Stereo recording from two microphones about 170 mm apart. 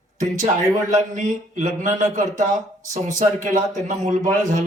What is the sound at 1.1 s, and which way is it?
Speech, 45° right (ahead or behind).